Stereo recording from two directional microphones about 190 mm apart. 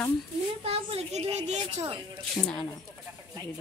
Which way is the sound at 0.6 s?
30° right (ahead or behind).